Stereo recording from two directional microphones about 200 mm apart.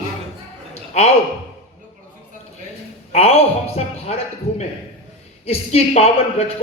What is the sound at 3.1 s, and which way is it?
A man's voice, 30° left (ahead or behind).